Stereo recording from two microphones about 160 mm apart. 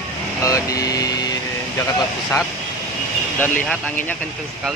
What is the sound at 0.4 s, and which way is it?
Speech, 20° left (ahead or behind).